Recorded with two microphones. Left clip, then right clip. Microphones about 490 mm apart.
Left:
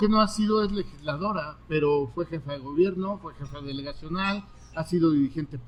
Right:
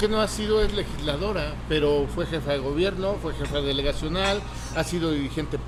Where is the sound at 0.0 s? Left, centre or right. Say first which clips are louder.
Even; left.